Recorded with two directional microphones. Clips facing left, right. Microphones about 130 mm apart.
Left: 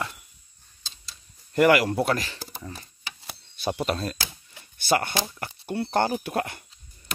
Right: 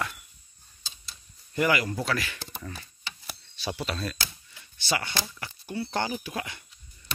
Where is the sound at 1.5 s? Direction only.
65° left (ahead or behind).